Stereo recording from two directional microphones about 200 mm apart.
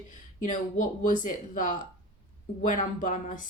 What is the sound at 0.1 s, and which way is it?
Speech, 40° left (ahead or behind).